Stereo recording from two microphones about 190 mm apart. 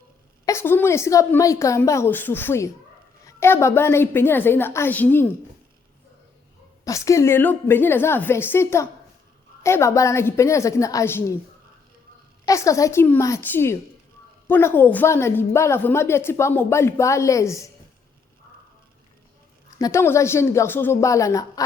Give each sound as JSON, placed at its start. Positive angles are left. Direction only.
{"t": 0.4, "sound": "a woman's voice", "side_deg": 15}
{"t": 6.8, "sound": "a woman's voice", "side_deg": 15}
{"t": 12.5, "sound": "a woman's voice", "side_deg": 15}
{"t": 19.8, "sound": "a woman's voice", "side_deg": 15}